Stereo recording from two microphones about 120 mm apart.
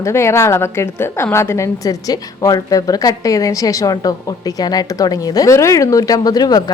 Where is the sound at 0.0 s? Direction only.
20° left (ahead or behind).